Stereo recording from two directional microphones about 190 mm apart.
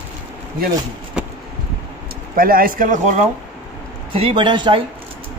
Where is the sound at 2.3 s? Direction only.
50° right (ahead or behind).